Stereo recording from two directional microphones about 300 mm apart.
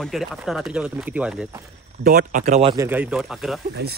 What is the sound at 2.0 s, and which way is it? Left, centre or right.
Speech, right.